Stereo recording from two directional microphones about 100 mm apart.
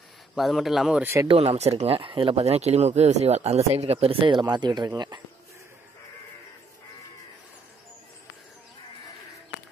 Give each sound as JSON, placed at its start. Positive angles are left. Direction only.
{"t": 0.4, "sound": "a man's voice", "side_deg": 0}
{"t": 1.2, "sound": "speech", "side_deg": -75}